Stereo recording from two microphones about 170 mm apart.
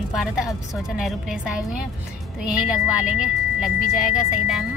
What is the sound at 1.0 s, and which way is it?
Speech, 5° right (ahead or behind).